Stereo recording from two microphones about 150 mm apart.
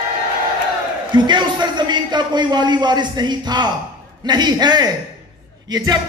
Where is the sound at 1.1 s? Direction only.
30° right (ahead or behind).